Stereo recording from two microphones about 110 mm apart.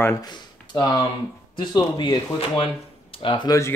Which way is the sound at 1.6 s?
40° left (ahead or behind).